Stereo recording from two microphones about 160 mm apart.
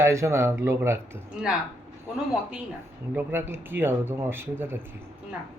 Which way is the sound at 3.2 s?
15° right (ahead or behind).